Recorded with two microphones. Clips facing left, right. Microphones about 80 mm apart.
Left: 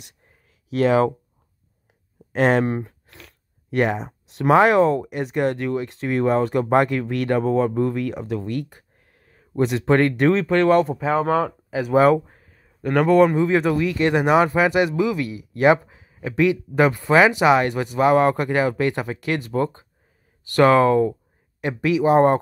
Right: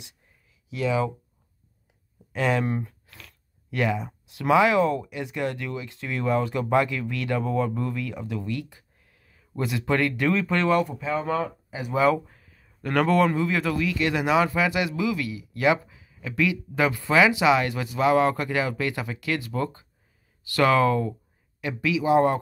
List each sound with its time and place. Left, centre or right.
0.7 s speech: left
2.3 s speech: left
3.1 s a sound: left
3.7 s speech: left
7.4 s speech: left
8.5 s speech: left
9.0 s a sound: left
9.9 s speech: left
11.1 s speech: left
12.1 s a sound: left
12.6 s speech: centre; by 22.4 s left